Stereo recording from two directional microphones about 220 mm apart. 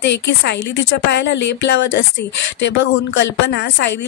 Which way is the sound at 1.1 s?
55° left (ahead or behind).